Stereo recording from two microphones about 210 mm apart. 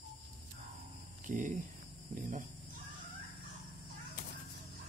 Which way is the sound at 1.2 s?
35° right (ahead or behind).